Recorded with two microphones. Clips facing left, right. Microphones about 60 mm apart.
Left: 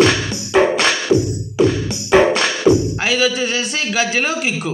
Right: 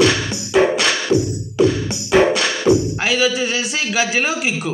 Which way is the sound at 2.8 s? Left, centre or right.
Centre.